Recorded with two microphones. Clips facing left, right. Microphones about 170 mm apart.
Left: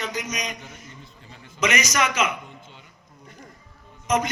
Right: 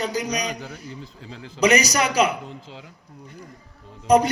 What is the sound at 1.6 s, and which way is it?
Speech, 35° right (ahead or behind).